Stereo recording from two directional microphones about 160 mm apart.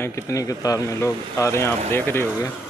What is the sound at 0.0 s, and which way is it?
Speech, 20° left (ahead or behind).